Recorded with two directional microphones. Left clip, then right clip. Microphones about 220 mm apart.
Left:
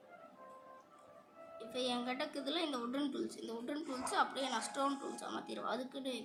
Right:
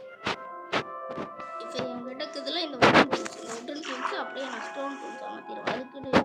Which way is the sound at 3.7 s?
10° left (ahead or behind).